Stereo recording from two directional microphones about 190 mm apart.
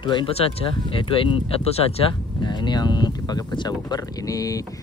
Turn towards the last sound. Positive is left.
turn(degrees=20)  # may be behind; listen again after turning